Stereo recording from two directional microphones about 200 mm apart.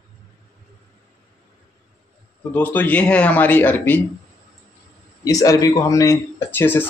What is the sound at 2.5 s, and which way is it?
Speech, 10° left (ahead or behind).